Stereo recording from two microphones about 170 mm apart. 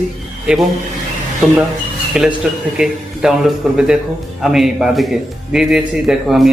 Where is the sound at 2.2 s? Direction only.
5° right (ahead or behind).